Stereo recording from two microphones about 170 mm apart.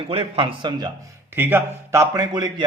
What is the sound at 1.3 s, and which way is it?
A man's voice, 10° right (ahead or behind).